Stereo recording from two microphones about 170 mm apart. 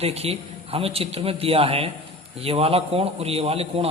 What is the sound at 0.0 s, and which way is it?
Speech, 35° right (ahead or behind).